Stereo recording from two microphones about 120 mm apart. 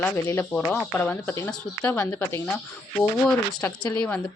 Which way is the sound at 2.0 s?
25° left (ahead or behind).